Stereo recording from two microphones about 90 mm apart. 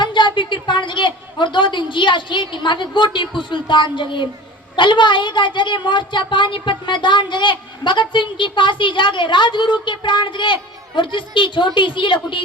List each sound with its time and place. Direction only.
0.0 s speech: 60° left (ahead or behind)